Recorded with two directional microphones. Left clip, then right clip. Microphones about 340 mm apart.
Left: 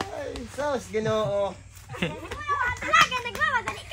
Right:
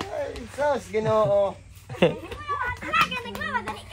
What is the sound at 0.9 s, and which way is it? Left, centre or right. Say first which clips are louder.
Speech: right 2 dB; right.